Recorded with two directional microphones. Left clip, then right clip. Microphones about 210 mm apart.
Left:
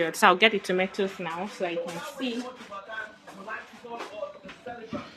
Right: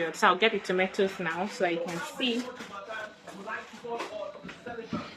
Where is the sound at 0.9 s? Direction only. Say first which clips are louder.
Right 1 dB; 10° left (ahead or behind).